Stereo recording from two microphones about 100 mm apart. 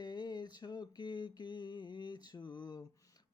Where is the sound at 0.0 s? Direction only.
45° left (ahead or behind).